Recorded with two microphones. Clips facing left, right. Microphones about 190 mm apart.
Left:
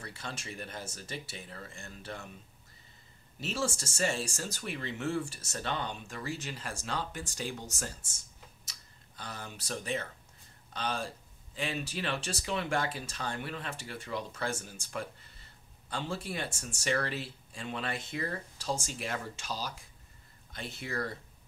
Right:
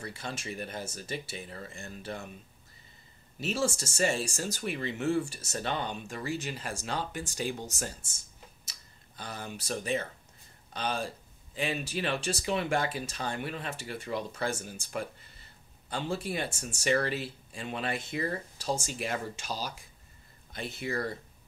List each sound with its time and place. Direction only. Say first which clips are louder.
0.3 s speech: right 4 dB; 15° right (ahead or behind)
3.3 s speech: right 4 dB; 10° right (ahead or behind)
9.2 s speech: right 4 dB; 15° right (ahead or behind)